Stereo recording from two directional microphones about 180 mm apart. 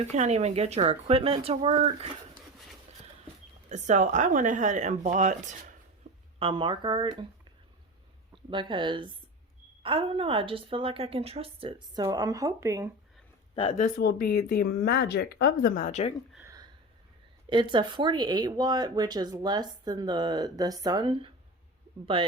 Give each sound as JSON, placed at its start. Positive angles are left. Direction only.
{"t": 0.1, "sound": "a woman's voice", "side_deg": -40}
{"t": 3.7, "sound": "speech", "side_deg": -40}
{"t": 6.0, "sound": "a sound", "side_deg": -35}
{"t": 6.4, "sound": "speech", "side_deg": -30}
{"t": 8.4, "sound": "a woman's voice", "side_deg": -25}
{"t": 12.0, "sound": "speech", "side_deg": -20}
{"t": 14.0, "sound": "speech", "side_deg": 60}
{"t": 16.4, "sound": "a sound", "side_deg": -20}
{"t": 17.5, "sound": "speech", "side_deg": -25}